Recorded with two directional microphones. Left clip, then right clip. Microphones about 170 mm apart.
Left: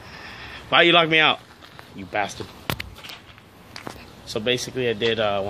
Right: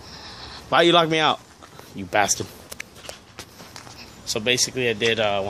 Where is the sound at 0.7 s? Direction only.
20° right (ahead or behind).